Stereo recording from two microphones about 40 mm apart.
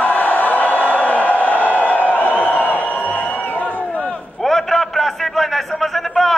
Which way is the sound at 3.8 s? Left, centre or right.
Left.